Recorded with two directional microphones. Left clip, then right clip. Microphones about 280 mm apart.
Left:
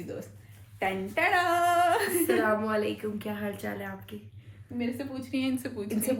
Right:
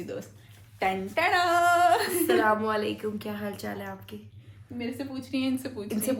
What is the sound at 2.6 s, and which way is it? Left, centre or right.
A woman's voice, centre.